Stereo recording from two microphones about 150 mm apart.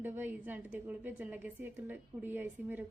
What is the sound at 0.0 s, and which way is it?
A woman's voice, 15° right (ahead or behind).